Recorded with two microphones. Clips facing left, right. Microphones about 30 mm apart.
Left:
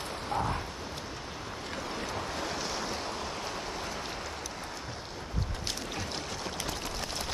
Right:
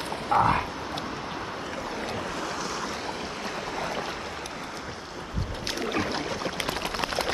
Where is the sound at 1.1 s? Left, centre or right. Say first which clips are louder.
Right 7 dB; right.